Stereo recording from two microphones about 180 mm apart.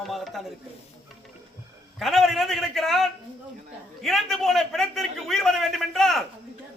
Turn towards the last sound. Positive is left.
turn(degrees=0)  # may be behind; listen again after turning